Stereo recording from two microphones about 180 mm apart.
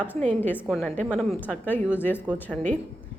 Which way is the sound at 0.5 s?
10° right (ahead or behind).